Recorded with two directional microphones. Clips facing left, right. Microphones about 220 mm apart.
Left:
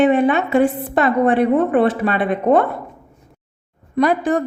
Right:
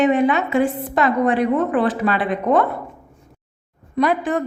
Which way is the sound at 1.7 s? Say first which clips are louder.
Left 3 dB; 25° left (ahead or behind).